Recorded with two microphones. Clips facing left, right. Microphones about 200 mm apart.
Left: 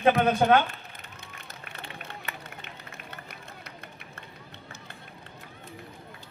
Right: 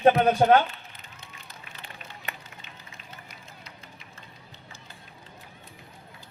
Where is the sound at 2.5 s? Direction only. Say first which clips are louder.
Left 4 dB; 60° left (ahead or behind).